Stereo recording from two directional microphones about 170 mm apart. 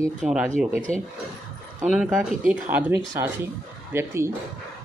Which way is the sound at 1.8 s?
5° right (ahead or behind).